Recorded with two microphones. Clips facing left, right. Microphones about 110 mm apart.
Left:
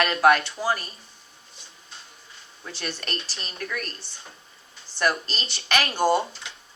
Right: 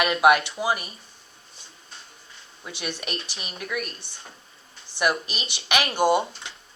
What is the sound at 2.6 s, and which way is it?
A woman's voice, 10° right (ahead or behind).